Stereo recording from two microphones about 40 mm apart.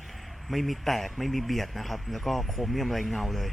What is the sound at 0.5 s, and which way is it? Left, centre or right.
Speech, centre.